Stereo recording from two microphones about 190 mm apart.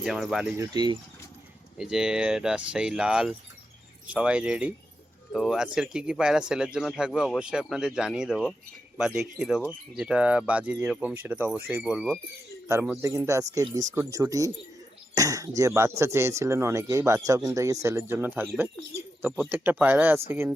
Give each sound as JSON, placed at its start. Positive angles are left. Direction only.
{"t": 0.0, "sound": "speech", "side_deg": 0}
{"t": 0.5, "sound": "speech", "side_deg": -20}
{"t": 1.8, "sound": "speech", "side_deg": -5}
{"t": 13.0, "sound": "speech", "side_deg": -15}